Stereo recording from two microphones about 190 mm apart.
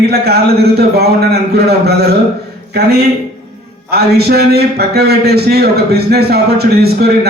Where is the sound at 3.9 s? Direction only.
55° right (ahead or behind).